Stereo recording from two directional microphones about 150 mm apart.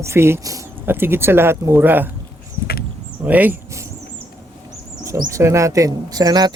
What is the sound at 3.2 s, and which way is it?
Speech, 10° right (ahead or behind).